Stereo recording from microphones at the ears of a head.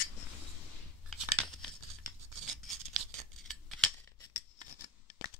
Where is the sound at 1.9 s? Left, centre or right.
Right.